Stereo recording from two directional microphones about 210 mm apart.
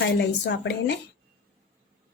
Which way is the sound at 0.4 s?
55° left (ahead or behind).